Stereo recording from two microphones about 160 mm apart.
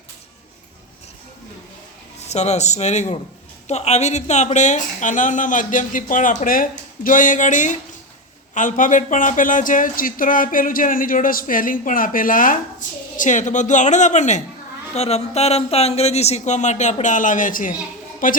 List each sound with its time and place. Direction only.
2.2 s speech: 45° left (ahead or behind)